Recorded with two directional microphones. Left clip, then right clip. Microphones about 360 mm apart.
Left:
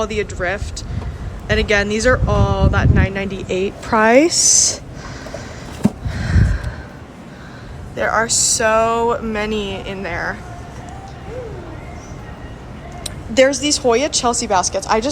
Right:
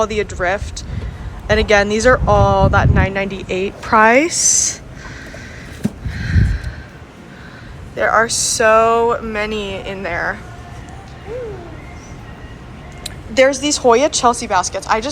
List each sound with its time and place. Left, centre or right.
0.0 s speech: centre
7.9 s speech: centre
13.1 s speech: centre